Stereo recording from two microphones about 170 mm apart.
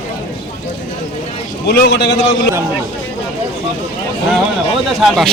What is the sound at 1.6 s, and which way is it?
Speech, 85° left.